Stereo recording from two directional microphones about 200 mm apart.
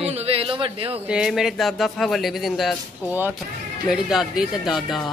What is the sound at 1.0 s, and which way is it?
Speech, 5° right (ahead or behind).